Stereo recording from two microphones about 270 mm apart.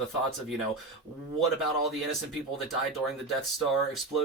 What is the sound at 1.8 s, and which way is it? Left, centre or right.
Speech, centre.